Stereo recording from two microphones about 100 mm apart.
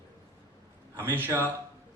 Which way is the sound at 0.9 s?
20° right (ahead or behind).